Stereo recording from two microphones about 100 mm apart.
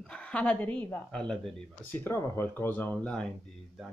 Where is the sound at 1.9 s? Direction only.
25° left (ahead or behind).